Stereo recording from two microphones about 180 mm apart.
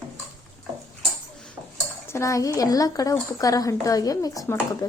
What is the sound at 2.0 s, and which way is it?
Speech, 15° left (ahead or behind).